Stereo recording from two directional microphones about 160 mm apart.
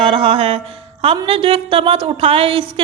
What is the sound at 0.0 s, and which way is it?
Music, 35° right (ahead or behind).